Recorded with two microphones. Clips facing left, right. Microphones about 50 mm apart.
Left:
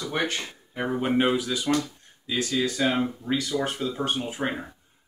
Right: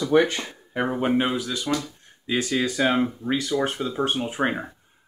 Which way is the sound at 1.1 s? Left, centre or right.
Centre.